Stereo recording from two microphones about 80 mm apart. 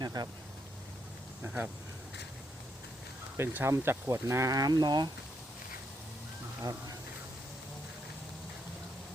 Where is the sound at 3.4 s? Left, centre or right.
Right.